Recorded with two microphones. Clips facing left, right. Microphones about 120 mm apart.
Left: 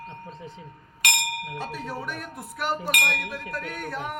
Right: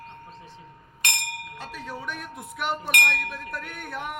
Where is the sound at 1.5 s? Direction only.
15° left (ahead or behind).